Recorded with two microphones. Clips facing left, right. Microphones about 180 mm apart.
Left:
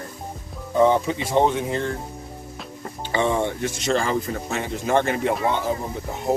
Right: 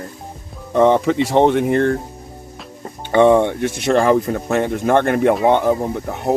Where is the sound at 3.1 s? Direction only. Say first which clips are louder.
Right 10 dB; 60° right (ahead or behind).